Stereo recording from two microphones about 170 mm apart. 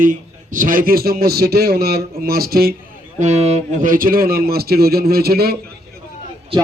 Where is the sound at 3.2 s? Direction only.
40° right (ahead or behind); by 5.6 s 65° right (ahead or behind).